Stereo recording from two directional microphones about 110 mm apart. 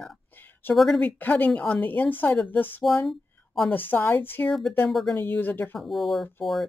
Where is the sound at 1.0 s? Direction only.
15° left (ahead or behind).